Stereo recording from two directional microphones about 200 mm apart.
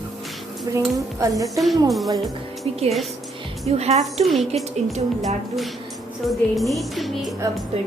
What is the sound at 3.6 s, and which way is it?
Speech, 30° right (ahead or behind).